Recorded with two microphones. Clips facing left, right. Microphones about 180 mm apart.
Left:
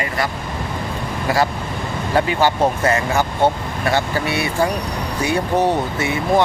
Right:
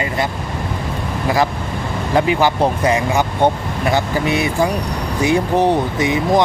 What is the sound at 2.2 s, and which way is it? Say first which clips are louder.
Speech: right 2 dB; 15° right (ahead or behind).